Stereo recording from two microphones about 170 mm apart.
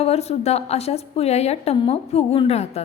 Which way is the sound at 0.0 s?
40° left (ahead or behind).